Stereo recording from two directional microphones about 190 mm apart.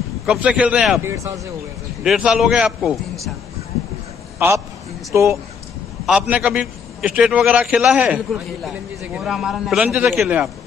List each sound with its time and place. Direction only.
0.3 s a man's voice: 5° right (ahead or behind)
1.0 s speech: 15° right (ahead or behind)
2.0 s a man's voice: 5° right (ahead or behind)
5.1 s a man's voice: 15° right (ahead or behind)